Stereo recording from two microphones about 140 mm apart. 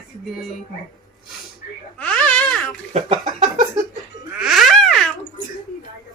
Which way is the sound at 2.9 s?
55° right (ahead or behind).